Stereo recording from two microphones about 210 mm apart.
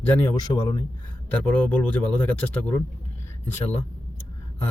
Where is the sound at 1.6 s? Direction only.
10° left (ahead or behind).